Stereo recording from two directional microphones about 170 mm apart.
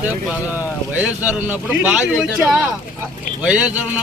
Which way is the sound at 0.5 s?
10° right (ahead or behind).